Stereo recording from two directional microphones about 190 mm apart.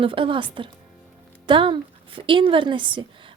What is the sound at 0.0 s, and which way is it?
Speech, 25° right (ahead or behind).